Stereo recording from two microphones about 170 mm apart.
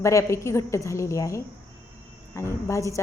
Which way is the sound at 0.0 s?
15° left (ahead or behind).